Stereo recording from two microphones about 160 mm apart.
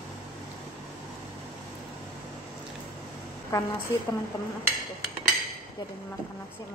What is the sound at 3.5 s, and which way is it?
Speech, 20° left (ahead or behind).